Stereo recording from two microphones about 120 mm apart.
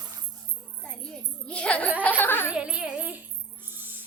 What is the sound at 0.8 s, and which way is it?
Children playing, 10° left (ahead or behind).